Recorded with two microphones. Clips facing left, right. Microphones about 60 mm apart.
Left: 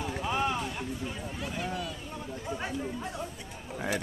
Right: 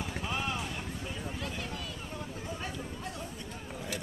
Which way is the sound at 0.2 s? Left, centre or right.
Centre.